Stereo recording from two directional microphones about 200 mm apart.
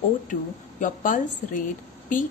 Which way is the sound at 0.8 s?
40° left (ahead or behind).